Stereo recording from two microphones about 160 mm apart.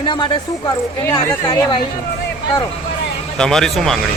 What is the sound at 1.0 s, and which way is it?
Speech, 20° left (ahead or behind).